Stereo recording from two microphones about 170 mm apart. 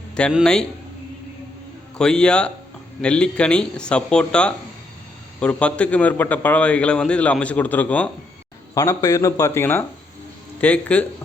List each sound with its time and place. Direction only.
0.3 s speech: 5° left (ahead or behind)
2.0 s a man's voice: 5° left (ahead or behind)
8.7 s a man's voice: 20° left (ahead or behind)